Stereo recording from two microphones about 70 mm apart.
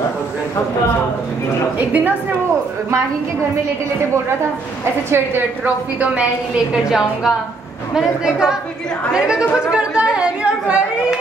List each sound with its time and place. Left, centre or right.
1.8 s a woman's voice: right
5.9 s a woman's voice: centre
6.7 s a woman's voice: centre
9.7 s chatter: centre